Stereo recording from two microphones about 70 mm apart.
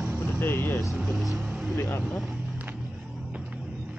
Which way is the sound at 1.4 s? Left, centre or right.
Centre.